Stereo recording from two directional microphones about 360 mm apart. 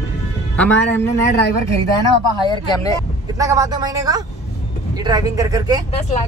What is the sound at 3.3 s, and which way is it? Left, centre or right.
Speech, centre.